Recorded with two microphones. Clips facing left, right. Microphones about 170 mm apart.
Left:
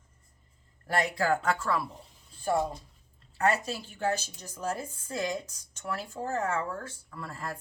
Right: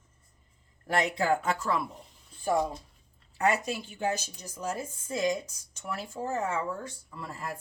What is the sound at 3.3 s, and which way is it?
Speech, 15° right (ahead or behind).